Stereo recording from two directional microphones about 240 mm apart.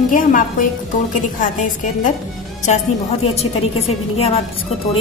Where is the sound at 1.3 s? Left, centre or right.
Left.